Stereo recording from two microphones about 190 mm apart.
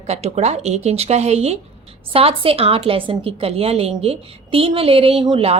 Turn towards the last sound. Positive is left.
turn(degrees=-30)  # may be behind; listen again after turning